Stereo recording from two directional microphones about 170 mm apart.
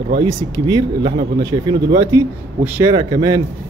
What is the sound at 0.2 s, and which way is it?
Speech, 25° right (ahead or behind).